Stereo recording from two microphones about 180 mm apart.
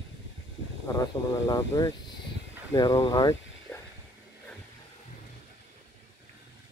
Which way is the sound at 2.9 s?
25° left (ahead or behind).